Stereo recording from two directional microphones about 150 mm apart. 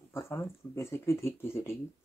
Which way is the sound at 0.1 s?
15° left (ahead or behind).